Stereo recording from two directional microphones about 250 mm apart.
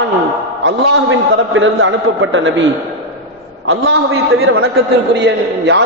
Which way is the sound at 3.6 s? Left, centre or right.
Right.